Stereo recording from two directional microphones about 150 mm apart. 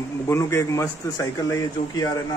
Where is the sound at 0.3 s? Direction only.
15° left (ahead or behind).